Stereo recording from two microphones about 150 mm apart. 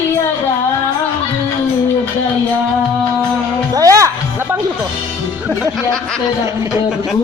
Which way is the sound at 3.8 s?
20° right (ahead or behind).